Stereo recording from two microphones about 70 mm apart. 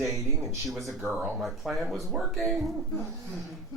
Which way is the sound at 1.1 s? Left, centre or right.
Centre.